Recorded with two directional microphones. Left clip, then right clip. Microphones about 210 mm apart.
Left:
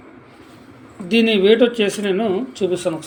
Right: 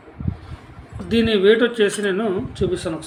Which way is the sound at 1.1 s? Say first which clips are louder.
Left 2 dB; 5° right (ahead or behind).